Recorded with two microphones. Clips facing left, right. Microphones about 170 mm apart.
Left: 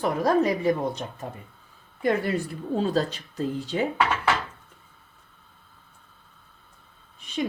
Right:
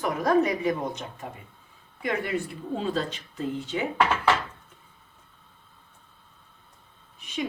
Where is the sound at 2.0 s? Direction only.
40° left (ahead or behind).